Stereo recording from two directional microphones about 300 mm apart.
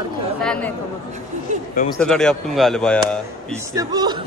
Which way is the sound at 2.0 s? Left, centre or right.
Centre.